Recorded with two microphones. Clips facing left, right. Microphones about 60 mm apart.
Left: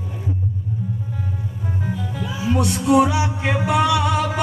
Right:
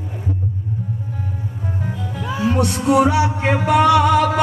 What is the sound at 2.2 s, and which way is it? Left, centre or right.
Music, right.